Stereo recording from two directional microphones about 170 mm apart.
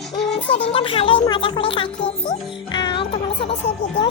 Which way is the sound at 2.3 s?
25° left (ahead or behind).